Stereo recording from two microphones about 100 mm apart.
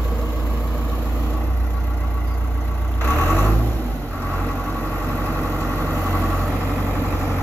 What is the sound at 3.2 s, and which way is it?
Vehicle, 20° left (ahead or behind).